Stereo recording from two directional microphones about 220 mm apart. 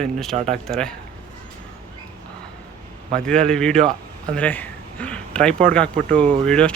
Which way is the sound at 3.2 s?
5° left (ahead or behind).